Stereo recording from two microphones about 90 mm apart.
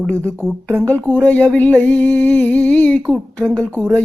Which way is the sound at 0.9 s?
15° left (ahead or behind).